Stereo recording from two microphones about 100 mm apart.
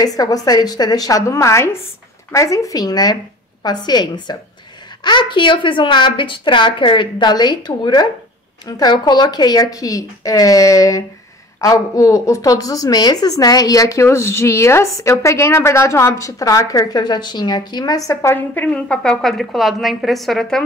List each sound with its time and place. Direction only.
0.0 s a woman's voice: 40° left (ahead or behind)
18.3 s a woman's voice: 15° left (ahead or behind)